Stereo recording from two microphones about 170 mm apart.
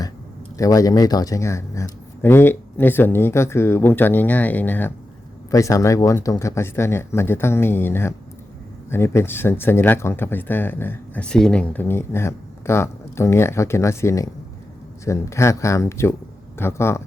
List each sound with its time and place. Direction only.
0.6 s speech: 20° left (ahead or behind)